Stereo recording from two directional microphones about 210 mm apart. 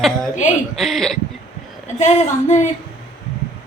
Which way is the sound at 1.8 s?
35° left (ahead or behind).